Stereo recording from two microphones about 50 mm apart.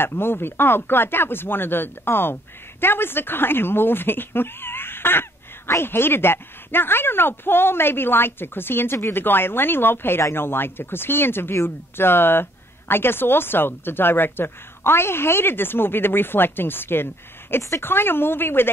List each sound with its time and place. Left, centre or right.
0.0 s speech: left